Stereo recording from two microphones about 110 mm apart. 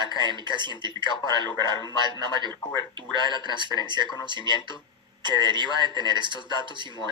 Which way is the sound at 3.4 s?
45° right (ahead or behind).